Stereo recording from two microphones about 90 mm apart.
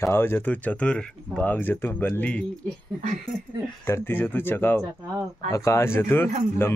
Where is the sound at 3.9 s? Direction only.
25° left (ahead or behind).